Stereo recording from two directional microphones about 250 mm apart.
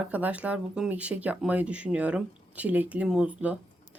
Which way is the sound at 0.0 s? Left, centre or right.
Centre.